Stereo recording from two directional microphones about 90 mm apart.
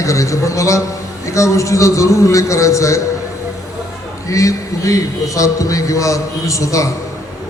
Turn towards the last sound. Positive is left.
turn(degrees=35)  # may be behind; listen again after turning